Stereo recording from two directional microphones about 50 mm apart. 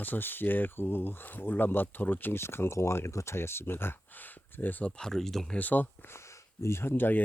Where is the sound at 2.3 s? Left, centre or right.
Left.